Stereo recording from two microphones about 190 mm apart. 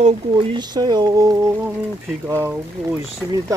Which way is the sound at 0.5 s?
20° right (ahead or behind).